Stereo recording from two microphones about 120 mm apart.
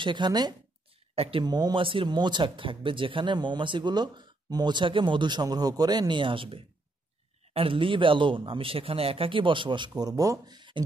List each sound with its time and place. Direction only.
0.0 s speech: 40° right (ahead or behind)
1.1 s speech: 55° right (ahead or behind)
1.4 s speech: 35° right (ahead or behind)